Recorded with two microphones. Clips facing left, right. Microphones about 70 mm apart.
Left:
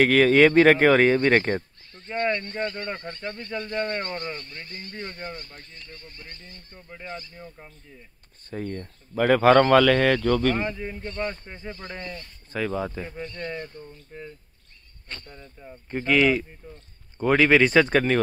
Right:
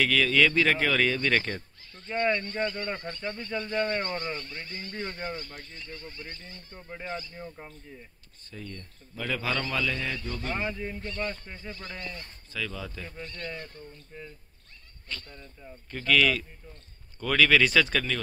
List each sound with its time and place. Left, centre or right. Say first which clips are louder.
0.0 s speech: left 7 dB; left
2.2 s speech: left 1 dB; centre
3.6 s speech: even; centre
8.5 s speech: left 10 dB; left
10.6 s speech: left 3 dB; centre
12.5 s speech: left 8 dB; left
13.2 s speech: left 4 dB; centre
15.3 s speech: left 3 dB; centre; by 18.2 s left